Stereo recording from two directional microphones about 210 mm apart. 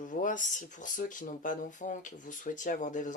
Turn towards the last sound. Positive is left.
turn(degrees=35)  # may be behind; listen again after turning